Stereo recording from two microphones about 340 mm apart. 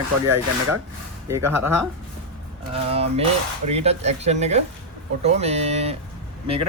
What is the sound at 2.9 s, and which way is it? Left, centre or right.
Speech, centre.